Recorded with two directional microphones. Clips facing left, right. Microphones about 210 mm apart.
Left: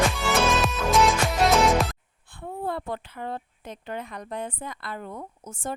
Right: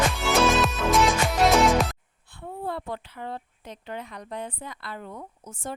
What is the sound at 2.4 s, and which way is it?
Speech, 50° left (ahead or behind).